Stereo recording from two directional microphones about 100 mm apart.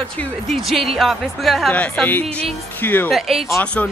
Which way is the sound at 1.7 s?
15° left (ahead or behind).